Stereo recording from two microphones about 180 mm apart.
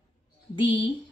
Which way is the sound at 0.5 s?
30° left (ahead or behind).